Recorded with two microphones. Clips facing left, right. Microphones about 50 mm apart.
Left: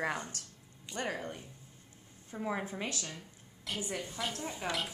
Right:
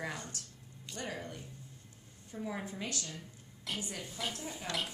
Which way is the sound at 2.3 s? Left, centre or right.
Left.